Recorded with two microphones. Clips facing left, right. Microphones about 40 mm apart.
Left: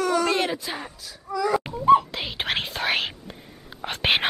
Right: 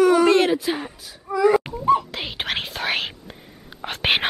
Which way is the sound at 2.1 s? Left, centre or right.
Centre.